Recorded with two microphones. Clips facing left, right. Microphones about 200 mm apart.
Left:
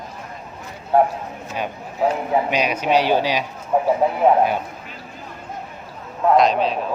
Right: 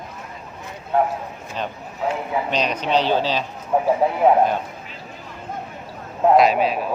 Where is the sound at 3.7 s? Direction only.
5° right (ahead or behind).